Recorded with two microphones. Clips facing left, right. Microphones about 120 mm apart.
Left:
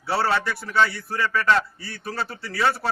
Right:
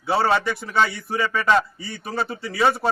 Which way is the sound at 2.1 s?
5° right (ahead or behind).